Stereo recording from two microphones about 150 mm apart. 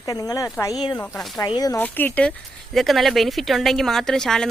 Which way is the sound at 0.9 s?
5° left (ahead or behind).